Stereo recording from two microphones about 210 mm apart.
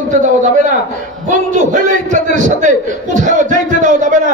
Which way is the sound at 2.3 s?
35° right (ahead or behind).